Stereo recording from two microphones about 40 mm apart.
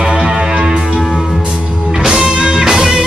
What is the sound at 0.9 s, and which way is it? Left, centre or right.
Music, centre.